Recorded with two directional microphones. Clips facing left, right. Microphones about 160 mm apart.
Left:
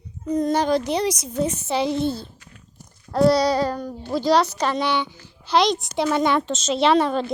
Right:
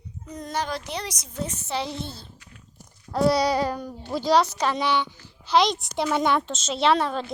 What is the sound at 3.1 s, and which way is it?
A woman's voice, 10° right (ahead or behind).